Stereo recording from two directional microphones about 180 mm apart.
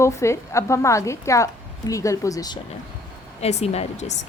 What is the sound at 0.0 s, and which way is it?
A woman's voice, 15° left (ahead or behind).